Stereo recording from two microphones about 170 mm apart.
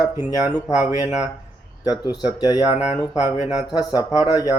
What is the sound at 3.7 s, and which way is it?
Speech, 20° left (ahead or behind).